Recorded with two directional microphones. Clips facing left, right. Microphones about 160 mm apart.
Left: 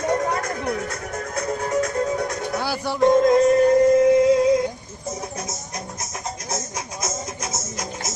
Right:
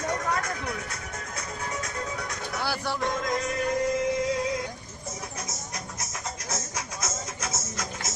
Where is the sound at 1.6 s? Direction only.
40° left (ahead or behind).